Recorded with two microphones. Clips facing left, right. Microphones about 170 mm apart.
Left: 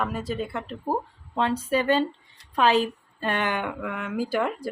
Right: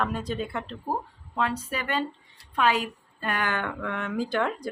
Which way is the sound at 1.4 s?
30° left (ahead or behind).